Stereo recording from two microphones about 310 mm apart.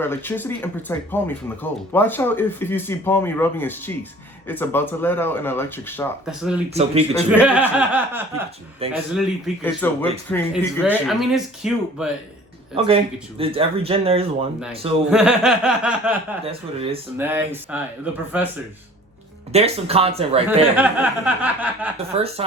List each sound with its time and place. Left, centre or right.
0.0 s speech: centre
6.7 s speech: centre
7.3 s speech: centre
8.8 s speech: centre
9.6 s speech: centre
13.4 s speech: centre
15.1 s speech: centre
16.5 s speech: centre
17.2 s speech: centre
19.5 s speech: centre
20.7 s speech: centre
22.1 s speech: centre